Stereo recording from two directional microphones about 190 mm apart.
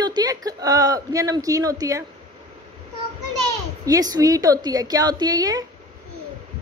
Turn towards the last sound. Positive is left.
turn(degrees=-20)  # may be behind; listen again after turning